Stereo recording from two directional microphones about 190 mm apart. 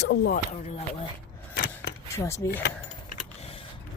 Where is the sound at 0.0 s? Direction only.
60° left (ahead or behind).